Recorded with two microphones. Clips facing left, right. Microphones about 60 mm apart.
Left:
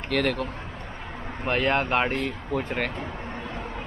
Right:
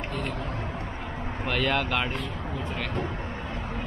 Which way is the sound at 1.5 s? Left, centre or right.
Left.